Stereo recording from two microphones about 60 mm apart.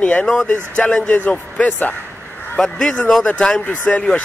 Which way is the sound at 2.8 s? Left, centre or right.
Left.